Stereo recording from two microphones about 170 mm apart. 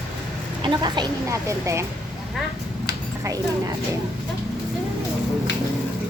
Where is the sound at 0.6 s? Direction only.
25° right (ahead or behind).